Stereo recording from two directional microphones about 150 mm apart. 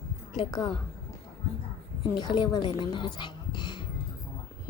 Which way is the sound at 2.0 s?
30° left (ahead or behind).